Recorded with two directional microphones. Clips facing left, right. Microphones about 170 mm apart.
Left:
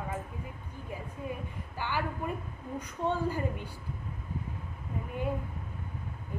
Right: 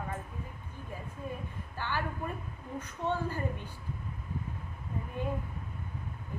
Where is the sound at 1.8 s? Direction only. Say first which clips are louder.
Left 2 dB; 15° left (ahead or behind).